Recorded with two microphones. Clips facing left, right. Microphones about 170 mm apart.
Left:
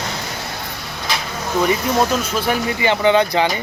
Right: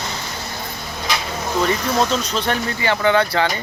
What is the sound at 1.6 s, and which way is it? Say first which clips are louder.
Speech: left 2 dB; 15° left (ahead or behind).